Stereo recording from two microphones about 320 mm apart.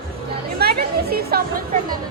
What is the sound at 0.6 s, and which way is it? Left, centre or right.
Music, right.